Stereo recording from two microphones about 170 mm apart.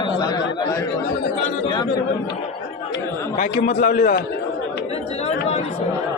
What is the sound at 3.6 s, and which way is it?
Speech, 55° left (ahead or behind).